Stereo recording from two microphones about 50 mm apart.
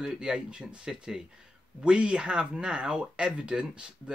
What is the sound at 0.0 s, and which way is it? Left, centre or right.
Speech, centre.